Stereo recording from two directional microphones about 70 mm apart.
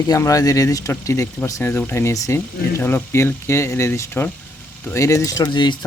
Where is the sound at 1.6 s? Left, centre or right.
Left.